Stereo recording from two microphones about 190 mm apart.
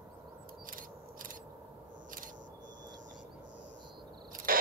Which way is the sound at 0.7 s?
45° right (ahead or behind).